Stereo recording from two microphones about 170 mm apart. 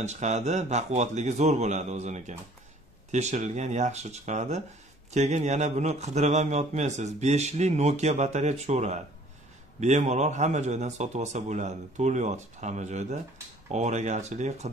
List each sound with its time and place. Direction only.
0.0 s a man's voice: 40° right (ahead or behind)